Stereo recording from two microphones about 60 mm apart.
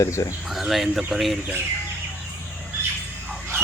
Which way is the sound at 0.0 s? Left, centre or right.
Left.